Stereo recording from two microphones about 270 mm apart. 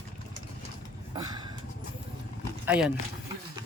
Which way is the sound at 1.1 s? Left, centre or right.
Centre.